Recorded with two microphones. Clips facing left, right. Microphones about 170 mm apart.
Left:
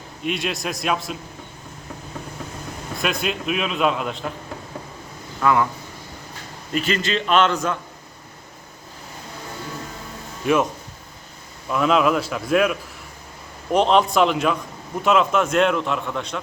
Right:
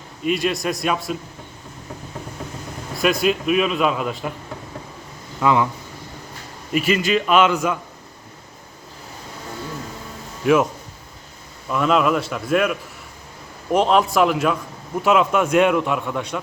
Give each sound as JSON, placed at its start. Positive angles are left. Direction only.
{"t": 0.3, "sound": "a man's voice", "side_deg": 0}
{"t": 3.0, "sound": "a man's voice", "side_deg": 0}
{"t": 5.4, "sound": "speech", "side_deg": -15}
{"t": 6.7, "sound": "a man's voice", "side_deg": -10}
{"t": 10.4, "sound": "a man's voice", "side_deg": -5}
{"t": 11.7, "sound": "a man's voice", "side_deg": 0}
{"t": 13.7, "sound": "a man's voice", "side_deg": -5}